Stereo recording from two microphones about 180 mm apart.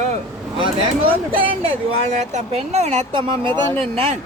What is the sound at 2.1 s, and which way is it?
Speech, 40° right (ahead or behind).